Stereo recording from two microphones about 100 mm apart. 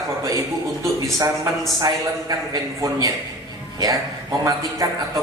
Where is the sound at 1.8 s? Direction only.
40° right (ahead or behind).